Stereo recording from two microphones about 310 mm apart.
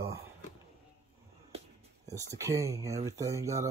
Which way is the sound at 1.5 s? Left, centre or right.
Centre.